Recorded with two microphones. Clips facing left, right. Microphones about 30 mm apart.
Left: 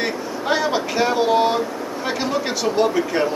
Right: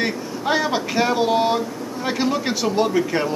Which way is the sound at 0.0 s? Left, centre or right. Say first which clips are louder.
Even; centre.